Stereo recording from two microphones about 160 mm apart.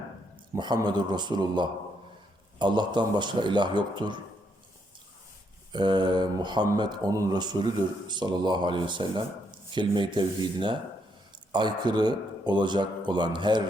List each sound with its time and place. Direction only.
0.5 s speech: 25° right (ahead or behind)
5.7 s speech: 30° right (ahead or behind)